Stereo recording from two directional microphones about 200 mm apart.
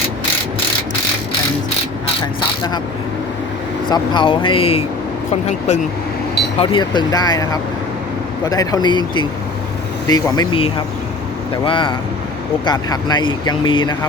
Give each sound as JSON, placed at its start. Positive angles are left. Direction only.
{"t": 3.8, "sound": "speech", "side_deg": 25}
{"t": 6.6, "sound": "speech", "side_deg": 25}